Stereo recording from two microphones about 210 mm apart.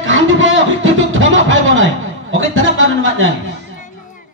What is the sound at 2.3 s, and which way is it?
A man's voice, 65° right (ahead or behind).